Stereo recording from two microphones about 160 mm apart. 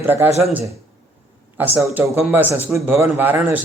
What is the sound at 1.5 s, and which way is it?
Speech, 10° right (ahead or behind).